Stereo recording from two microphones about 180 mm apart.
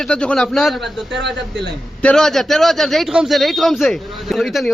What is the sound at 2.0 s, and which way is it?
Speech, 5° left (ahead or behind).